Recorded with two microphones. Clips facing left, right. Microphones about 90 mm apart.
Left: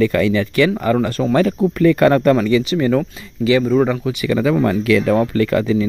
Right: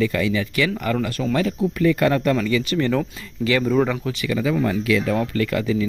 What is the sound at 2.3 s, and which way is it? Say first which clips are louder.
Speech: left 6 dB; 35° left (ahead or behind).